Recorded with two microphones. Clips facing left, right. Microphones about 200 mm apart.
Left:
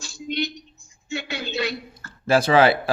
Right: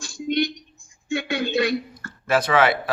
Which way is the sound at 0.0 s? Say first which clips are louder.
Right 5 dB; 50° right (ahead or behind).